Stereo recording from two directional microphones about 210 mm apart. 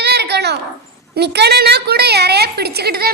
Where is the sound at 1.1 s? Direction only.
50° right (ahead or behind).